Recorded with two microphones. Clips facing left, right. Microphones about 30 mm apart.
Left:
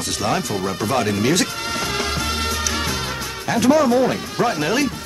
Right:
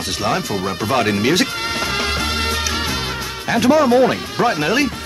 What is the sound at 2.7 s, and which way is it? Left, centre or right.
Music, right.